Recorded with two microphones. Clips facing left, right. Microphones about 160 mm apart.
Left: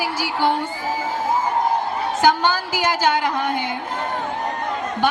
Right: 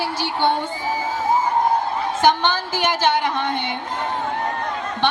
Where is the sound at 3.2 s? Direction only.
20° right (ahead or behind).